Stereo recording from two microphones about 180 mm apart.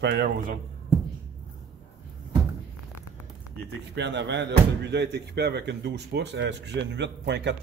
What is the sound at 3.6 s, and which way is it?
Speech, 75° right (ahead or behind).